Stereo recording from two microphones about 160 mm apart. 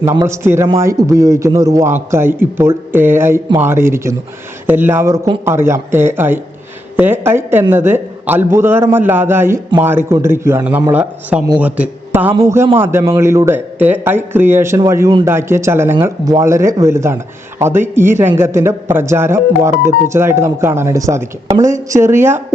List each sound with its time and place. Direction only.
0.0 s a man's voice: 20° right (ahead or behind)